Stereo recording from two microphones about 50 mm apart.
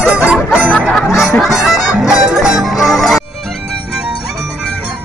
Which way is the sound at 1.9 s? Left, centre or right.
Centre.